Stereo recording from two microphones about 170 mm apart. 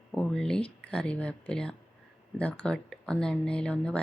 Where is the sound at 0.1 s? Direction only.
5° left (ahead or behind).